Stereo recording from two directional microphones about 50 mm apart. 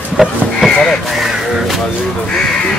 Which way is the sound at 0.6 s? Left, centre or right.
Centre.